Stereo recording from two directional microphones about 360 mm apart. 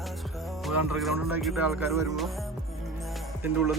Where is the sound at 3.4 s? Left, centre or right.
Centre.